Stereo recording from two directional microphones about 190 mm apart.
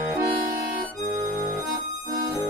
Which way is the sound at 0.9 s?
40° right (ahead or behind).